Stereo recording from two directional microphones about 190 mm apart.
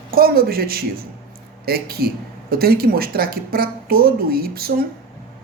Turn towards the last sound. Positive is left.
turn(degrees=-50)  # may be behind; listen again after turning